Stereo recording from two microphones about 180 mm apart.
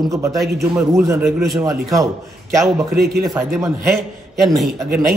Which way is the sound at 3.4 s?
15° right (ahead or behind).